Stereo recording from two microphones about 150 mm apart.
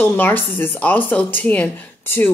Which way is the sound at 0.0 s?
15° left (ahead or behind).